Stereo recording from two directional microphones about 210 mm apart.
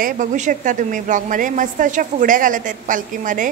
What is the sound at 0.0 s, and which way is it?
A woman's voice, 35° right (ahead or behind).